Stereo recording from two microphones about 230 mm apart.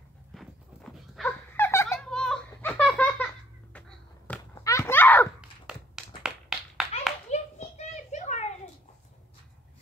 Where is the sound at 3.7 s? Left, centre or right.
Centre.